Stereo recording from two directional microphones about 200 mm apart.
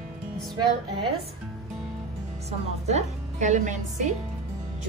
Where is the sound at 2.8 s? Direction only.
35° right (ahead or behind).